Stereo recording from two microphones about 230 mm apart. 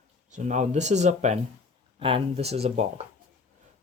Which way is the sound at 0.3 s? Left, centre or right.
Right.